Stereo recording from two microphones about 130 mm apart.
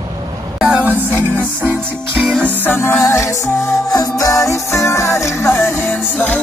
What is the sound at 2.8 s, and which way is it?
Music, 20° left (ahead or behind).